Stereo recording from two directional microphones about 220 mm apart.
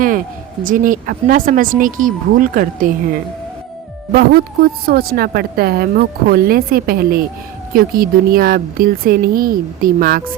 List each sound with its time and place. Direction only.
0.6 s speech: 35° right (ahead or behind)
4.1 s a woman's voice: 45° right (ahead or behind)